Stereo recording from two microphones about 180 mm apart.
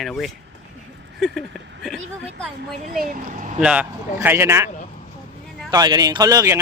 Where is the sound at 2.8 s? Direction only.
50° right (ahead or behind).